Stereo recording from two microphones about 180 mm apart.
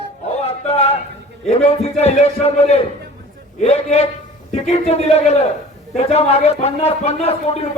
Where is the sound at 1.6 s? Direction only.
35° left (ahead or behind).